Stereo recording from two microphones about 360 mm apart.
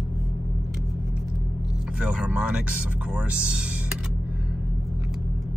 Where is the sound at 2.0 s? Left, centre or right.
Centre.